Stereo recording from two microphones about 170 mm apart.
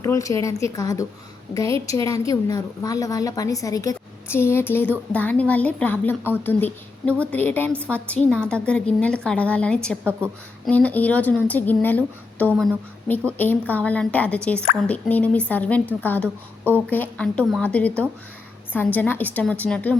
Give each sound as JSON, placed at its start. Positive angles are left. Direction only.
{"t": 0.0, "sound": "a woman's voice", "side_deg": 20}
{"t": 10.0, "sound": "a woman's voice", "side_deg": -15}
{"t": 10.7, "sound": "speech", "side_deg": 10}